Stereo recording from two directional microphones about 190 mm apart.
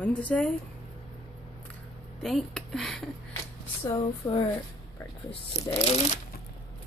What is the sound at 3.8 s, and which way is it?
Speech, 25° left (ahead or behind).